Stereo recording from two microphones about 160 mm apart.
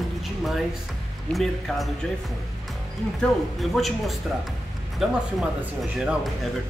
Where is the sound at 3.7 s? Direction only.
Centre (ahead or behind).